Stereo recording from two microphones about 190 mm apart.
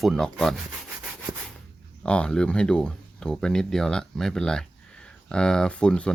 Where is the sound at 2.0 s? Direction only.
5° left (ahead or behind).